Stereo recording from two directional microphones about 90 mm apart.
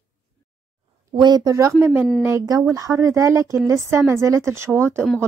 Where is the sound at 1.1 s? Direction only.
50° right (ahead or behind).